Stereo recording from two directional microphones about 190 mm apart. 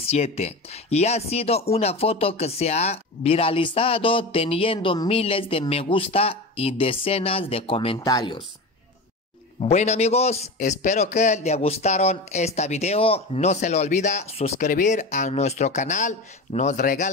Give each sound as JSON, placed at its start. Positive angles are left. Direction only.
{"t": 0.0, "sound": "speech", "side_deg": 35}
{"t": 9.6, "sound": "speech", "side_deg": 35}